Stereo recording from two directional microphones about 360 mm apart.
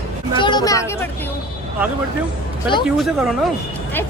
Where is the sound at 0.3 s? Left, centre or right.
Centre.